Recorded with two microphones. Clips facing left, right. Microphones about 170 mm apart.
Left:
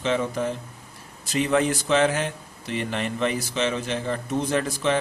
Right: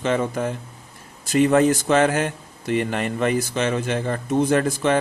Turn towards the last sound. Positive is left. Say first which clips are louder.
# right 4 dB
turn(degrees=-50)  # may be behind; listen again after turning